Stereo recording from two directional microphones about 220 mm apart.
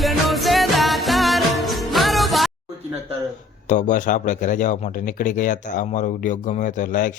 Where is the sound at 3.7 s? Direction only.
35° left (ahead or behind).